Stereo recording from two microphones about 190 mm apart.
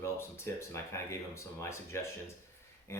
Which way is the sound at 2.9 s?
15° left (ahead or behind).